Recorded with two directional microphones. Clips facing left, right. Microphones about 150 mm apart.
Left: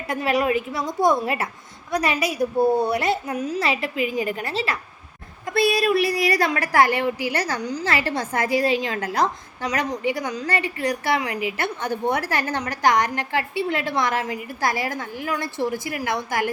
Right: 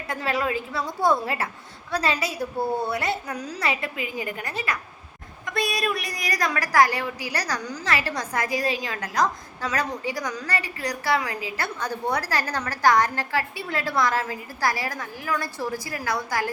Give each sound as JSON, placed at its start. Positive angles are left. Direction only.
{"t": 0.1, "sound": "a woman's voice", "side_deg": 20}